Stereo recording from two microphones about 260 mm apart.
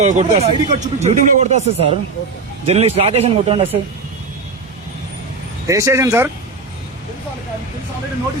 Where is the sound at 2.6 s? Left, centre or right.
Right.